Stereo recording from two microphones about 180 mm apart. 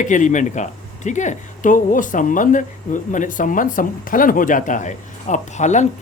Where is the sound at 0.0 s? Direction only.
45° left (ahead or behind).